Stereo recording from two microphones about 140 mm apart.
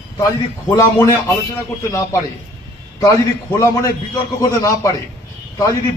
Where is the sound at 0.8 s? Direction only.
20° left (ahead or behind).